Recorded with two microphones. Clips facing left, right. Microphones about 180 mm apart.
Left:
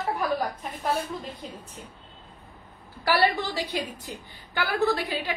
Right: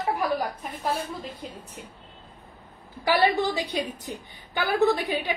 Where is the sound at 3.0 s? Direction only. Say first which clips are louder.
Right 2 dB; 20° right (ahead or behind).